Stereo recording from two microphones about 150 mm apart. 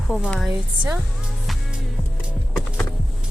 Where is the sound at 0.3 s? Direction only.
Centre (ahead or behind).